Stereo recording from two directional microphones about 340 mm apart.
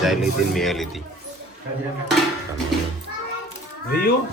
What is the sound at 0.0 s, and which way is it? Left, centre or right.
Speech, centre.